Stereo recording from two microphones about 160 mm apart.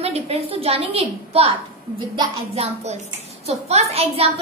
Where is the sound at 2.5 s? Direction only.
40° right (ahead or behind).